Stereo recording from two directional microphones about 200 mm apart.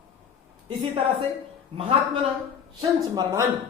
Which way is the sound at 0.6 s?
25° right (ahead or behind).